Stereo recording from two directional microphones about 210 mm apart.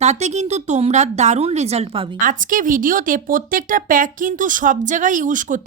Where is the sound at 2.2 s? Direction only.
40° right (ahead or behind).